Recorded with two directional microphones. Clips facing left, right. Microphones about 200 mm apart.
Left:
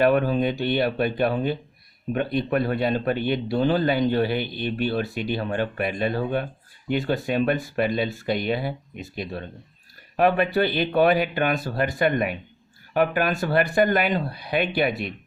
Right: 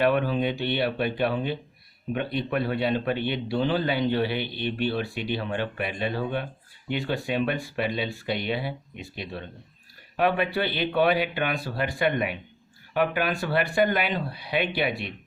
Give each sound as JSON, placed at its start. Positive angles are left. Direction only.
{"t": 0.0, "sound": "speech", "side_deg": 45}